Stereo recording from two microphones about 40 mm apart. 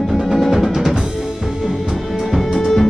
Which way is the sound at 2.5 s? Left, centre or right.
Centre.